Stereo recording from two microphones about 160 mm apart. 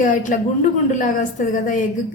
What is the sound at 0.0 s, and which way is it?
A woman's voice, 55° left (ahead or behind).